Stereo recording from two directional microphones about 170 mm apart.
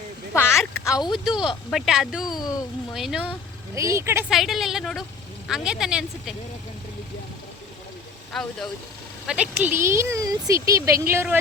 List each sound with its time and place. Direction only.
0.3 s a sound: 15° left (ahead or behind)
0.9 s speech: 20° left (ahead or behind)
1.1 s speech: 5° right (ahead or behind)
2.2 s speech: 25° left (ahead or behind)
2.9 s speech: centre (ahead or behind)
3.8 s speech: 15° right (ahead or behind)
4.3 s speech: centre (ahead or behind)
8.3 s speech: 5° left (ahead or behind); by 11.3 s 15° right (ahead or behind)